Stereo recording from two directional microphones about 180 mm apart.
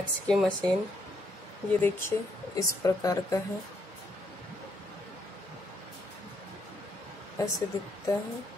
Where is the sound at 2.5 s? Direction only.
20° left (ahead or behind).